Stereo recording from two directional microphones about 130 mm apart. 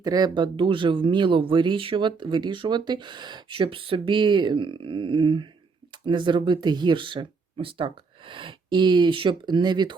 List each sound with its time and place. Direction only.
0.0 s speech: 30° right (ahead or behind)